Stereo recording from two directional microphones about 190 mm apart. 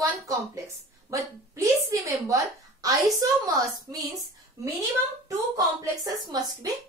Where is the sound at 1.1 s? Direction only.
15° right (ahead or behind).